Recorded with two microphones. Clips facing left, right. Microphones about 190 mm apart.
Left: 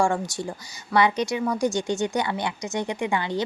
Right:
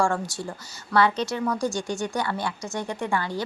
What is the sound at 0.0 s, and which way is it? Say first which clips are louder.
A woman's voice: left 1 dB; 15° left (ahead or behind).